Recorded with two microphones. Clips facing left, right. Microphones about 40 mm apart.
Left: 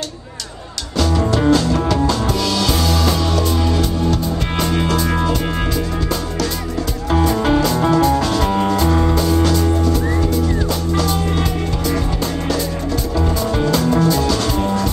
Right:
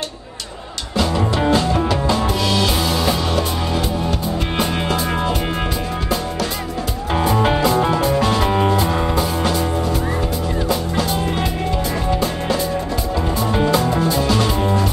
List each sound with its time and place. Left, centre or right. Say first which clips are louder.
1.3 s music: left 3 dB; right
7.1 s music: left 1 dB; centre
13.4 s music: right 2 dB; right